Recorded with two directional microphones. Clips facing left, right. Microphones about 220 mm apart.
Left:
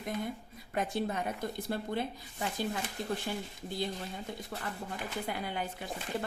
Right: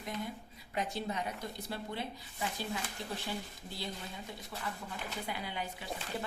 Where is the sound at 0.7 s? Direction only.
50° left (ahead or behind).